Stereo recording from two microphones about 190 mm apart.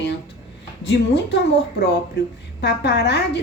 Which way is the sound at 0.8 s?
65° left (ahead or behind).